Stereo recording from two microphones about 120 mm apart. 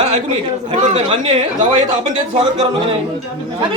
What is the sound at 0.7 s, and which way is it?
Speech, 45° right (ahead or behind).